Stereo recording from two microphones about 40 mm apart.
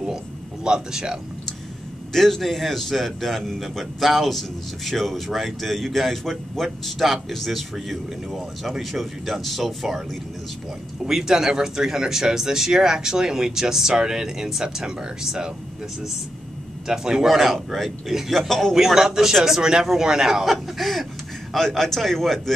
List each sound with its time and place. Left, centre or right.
0.7 s speech: centre
2.1 s a man's voice: centre
11.1 s speech: centre
16.8 s a man's voice: centre
18.8 s speech: centre
20.6 s a man's voice: centre